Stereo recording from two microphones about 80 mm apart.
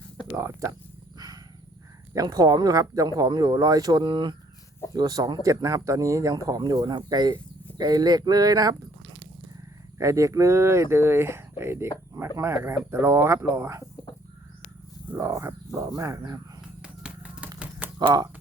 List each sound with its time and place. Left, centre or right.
0.3 s speech: right
2.1 s speech: right
4.0 s speech: right
4.9 s speech: right
10.0 s speech: right
15.2 s speech: right
16.8 s a sound: centre